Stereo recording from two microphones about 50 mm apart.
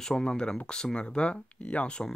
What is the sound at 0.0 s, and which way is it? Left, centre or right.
Speech, centre.